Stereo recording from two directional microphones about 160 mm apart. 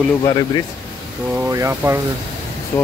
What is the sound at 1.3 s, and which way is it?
Speech, 20° right (ahead or behind).